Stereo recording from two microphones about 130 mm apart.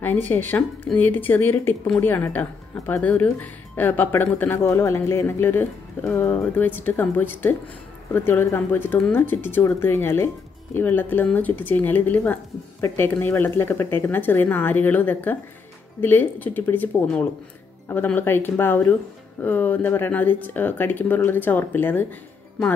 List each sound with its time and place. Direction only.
0.0 s speech: 15° left (ahead or behind)